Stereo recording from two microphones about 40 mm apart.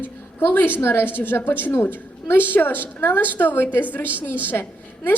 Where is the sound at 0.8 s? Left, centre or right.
Left.